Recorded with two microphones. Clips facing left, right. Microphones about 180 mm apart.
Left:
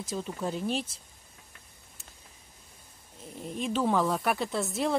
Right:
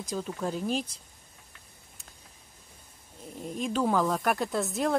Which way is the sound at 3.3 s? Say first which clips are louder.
Right 1 dB; centre (ahead or behind).